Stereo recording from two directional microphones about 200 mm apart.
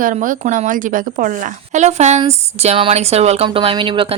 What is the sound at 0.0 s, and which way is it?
A woman's voice, 40° right (ahead or behind).